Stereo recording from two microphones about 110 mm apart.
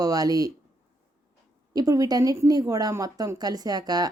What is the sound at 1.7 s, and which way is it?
Speech, 35° right (ahead or behind).